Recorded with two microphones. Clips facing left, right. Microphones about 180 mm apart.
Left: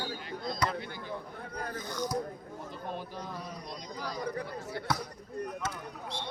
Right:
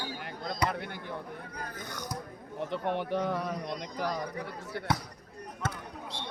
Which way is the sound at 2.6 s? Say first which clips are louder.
Right 9 dB; 75° right (ahead or behind).